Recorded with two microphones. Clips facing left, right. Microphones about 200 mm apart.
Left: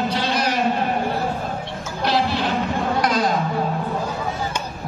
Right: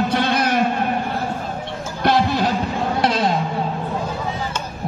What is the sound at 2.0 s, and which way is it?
Music, 50° right (ahead or behind).